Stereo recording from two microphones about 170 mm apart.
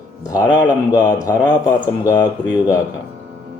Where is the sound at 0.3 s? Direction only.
25° left (ahead or behind).